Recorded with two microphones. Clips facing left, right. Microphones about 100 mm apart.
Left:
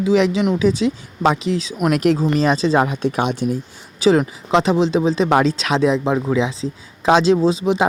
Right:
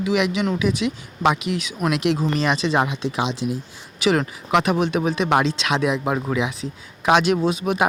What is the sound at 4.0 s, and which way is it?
Speech, 30° left (ahead or behind).